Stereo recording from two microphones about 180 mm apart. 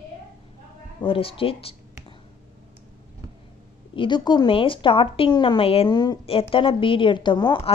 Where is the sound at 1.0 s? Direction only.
30° left (ahead or behind).